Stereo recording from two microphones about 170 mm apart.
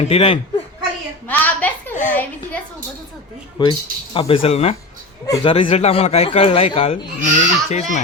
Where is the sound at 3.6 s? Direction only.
25° left (ahead or behind).